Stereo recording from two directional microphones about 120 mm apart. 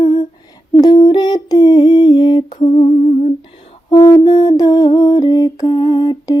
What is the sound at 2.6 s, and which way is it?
Humming, 65° left (ahead or behind).